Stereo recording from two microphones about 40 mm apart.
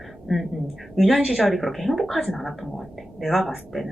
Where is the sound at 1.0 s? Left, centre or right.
Centre.